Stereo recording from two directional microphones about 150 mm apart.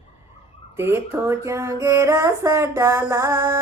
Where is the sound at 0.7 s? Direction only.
15° right (ahead or behind).